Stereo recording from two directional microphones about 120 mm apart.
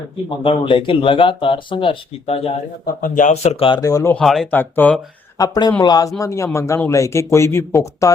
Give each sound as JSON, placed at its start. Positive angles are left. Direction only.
{"t": 0.3, "sound": "speech", "side_deg": 45}
{"t": 3.0, "sound": "speech", "side_deg": 90}
{"t": 3.8, "sound": "a man's voice", "side_deg": 30}
{"t": 4.2, "sound": "speech", "side_deg": 0}
{"t": 4.5, "sound": "speech", "side_deg": 15}
{"t": 5.4, "sound": "a man's voice", "side_deg": 35}